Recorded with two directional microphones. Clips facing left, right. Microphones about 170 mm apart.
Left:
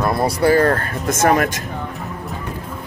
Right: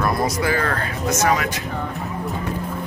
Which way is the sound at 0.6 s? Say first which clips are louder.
Left 6 dB; 45° left (ahead or behind).